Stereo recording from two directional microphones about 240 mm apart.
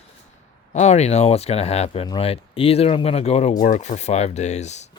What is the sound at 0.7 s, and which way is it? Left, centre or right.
Speech, left.